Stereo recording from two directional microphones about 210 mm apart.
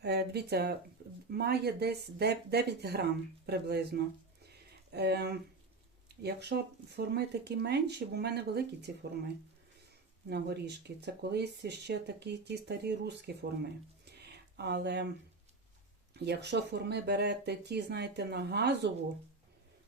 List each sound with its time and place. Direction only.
0.0 s speech: 50° right (ahead or behind)
14.0 s a sound: 50° right (ahead or behind)
16.1 s speech: 55° right (ahead or behind)